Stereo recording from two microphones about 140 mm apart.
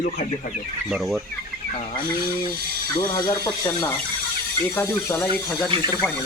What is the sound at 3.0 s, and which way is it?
Speech, 25° left (ahead or behind).